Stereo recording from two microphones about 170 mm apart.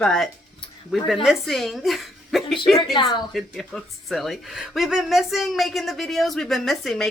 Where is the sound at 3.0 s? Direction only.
25° left (ahead or behind).